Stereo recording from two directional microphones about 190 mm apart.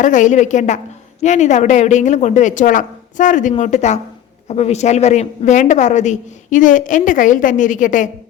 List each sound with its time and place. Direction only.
0.0 s a woman's voice: 40° left (ahead or behind)